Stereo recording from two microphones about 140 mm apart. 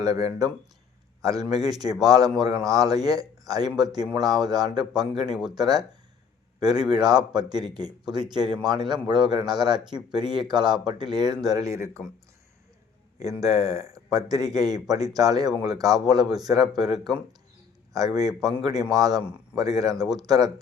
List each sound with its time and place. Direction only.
0.0 s speech: 25° right (ahead or behind)
6.9 s speech: 30° right (ahead or behind)
13.4 s speech: 25° right (ahead or behind)
17.9 s speech: 25° right (ahead or behind)